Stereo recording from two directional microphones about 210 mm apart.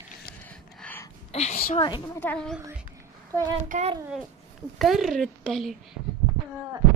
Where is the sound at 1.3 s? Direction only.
30° left (ahead or behind).